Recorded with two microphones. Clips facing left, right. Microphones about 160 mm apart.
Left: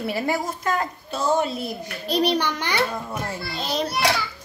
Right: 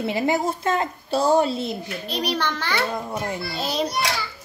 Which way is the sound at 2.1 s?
30° left (ahead or behind).